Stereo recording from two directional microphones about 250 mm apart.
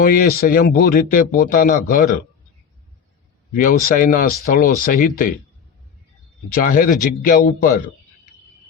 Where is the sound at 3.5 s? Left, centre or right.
Left.